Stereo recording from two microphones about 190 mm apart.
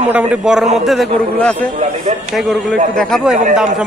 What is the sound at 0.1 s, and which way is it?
Speech, 10° right (ahead or behind).